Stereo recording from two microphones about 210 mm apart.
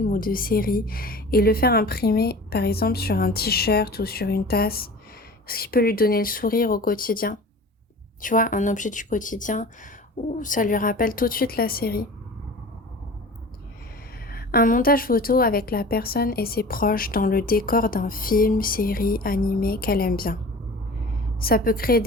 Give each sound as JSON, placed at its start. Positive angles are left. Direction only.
{"t": 0.0, "sound": "a woman's voice", "side_deg": 40}
{"t": 14.3, "sound": "a woman's voice", "side_deg": 45}
{"t": 21.4, "sound": "a woman's voice", "side_deg": 45}